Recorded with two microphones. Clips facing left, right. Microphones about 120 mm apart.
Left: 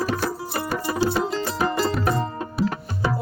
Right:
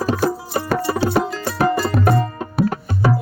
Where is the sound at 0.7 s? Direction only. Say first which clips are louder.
Right 3 dB; 60° right (ahead or behind).